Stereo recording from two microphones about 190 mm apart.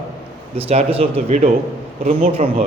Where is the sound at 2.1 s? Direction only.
45° right (ahead or behind).